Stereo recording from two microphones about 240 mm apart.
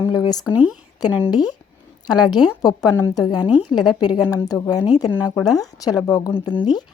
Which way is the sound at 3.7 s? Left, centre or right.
Centre.